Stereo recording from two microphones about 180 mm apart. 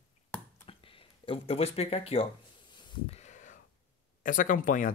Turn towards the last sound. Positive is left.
turn(degrees=50)  # may be behind; listen again after turning